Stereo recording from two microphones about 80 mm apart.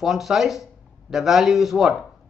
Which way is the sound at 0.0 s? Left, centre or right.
Centre.